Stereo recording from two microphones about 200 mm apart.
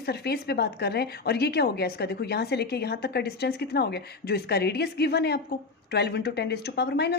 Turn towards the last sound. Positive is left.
turn(degrees=55)  # may be behind; listen again after turning